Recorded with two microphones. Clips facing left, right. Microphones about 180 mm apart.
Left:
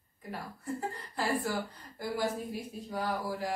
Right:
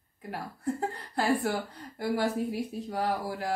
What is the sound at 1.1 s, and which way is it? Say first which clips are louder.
Speech: right 5 dB; 70° right (ahead or behind).